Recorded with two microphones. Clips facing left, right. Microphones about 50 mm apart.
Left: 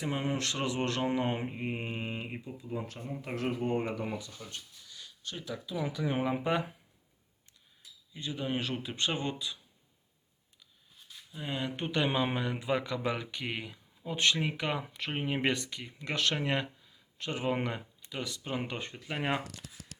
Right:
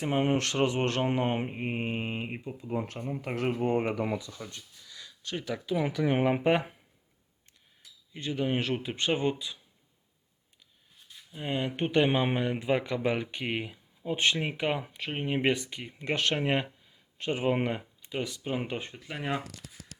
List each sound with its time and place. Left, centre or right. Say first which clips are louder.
0.0 s mantra: right 6 dB; right
3.3 s speech: right 4 dB; right
5.3 s speech: right 6 dB; right
5.7 s speech: right 6 dB; right
7.8 s a sound: right 2 dB; right
8.4 s mantra: right 2 dB; right
11.3 s speech: right 4 dB; right
14.9 s speech: right 2 dB; centre
15.4 s speech: right 3 dB; right
18.4 s speech: right 3 dB; centre